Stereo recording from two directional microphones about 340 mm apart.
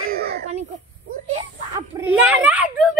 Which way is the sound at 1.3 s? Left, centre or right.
Centre.